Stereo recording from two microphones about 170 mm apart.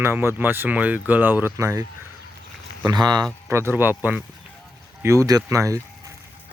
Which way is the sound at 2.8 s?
25° right (ahead or behind).